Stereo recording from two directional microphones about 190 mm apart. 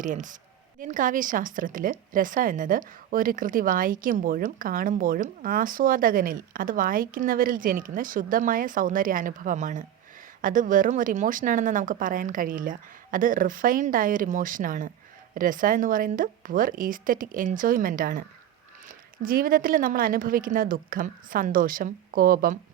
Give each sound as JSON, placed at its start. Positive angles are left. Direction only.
{"t": 0.0, "sound": "a woman's voice", "side_deg": -40}